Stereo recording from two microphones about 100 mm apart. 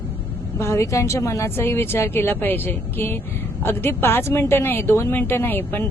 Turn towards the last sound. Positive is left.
turn(degrees=20)  # may be behind; listen again after turning